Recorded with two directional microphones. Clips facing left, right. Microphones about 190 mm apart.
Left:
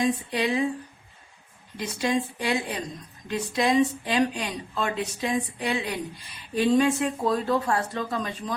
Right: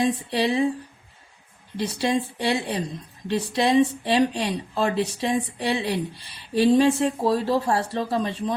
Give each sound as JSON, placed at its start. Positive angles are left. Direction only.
{"t": 0.0, "sound": "speech", "side_deg": -30}
{"t": 1.7, "sound": "speech", "side_deg": -30}